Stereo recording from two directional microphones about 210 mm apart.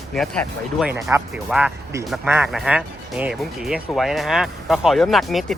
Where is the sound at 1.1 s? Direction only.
10° right (ahead or behind).